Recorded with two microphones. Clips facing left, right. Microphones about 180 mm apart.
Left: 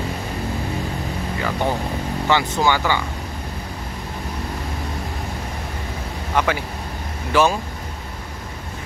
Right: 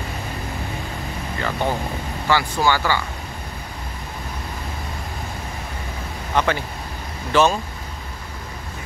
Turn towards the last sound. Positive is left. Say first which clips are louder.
# even
turn(degrees=10)  # may be behind; listen again after turning